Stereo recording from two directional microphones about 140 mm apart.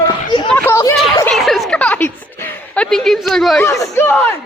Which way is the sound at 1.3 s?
Centre (ahead or behind).